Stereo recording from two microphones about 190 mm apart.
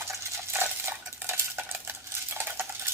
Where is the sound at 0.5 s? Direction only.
10° right (ahead or behind).